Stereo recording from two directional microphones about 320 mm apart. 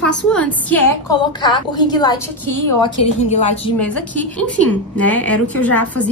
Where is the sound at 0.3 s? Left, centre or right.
Centre; by 3.7 s left.